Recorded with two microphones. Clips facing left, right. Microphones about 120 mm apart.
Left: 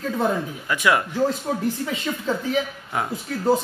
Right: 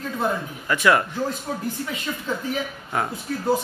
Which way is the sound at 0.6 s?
10° left (ahead or behind).